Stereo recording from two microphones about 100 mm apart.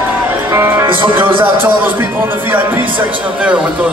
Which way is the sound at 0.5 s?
30° right (ahead or behind).